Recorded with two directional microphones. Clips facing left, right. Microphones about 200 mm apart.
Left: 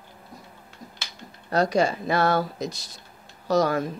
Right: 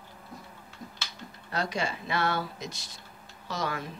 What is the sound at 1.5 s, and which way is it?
Speech, 40° left (ahead or behind).